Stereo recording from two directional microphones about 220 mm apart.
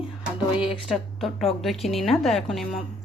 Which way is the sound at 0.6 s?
25° left (ahead or behind).